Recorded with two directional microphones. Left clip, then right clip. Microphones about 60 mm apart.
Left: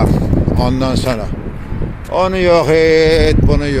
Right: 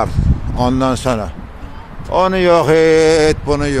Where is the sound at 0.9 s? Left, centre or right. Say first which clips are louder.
Even; right.